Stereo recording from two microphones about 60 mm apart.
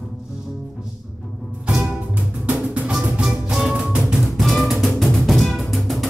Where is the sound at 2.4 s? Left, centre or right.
Right.